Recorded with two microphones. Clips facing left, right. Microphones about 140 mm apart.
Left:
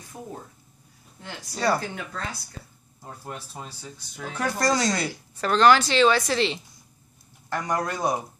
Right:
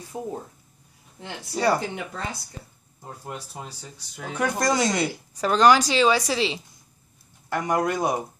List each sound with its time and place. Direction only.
0.1 s a woman's voice: 15° right (ahead or behind)
1.5 s a woman's voice: 15° right (ahead or behind)
3.3 s a woman's voice: 10° right (ahead or behind)
5.4 s a woman's voice: 10° right (ahead or behind)
7.4 s a woman's voice: 20° right (ahead or behind)